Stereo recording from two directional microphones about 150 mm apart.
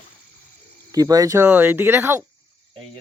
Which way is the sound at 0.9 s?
25° right (ahead or behind).